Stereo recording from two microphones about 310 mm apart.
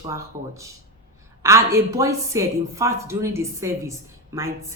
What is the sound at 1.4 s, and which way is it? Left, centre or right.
Speech, centre.